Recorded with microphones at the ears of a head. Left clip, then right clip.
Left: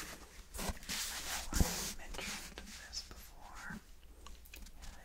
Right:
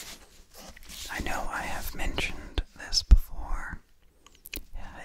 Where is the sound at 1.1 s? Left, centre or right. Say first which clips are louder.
Right 10 dB; right.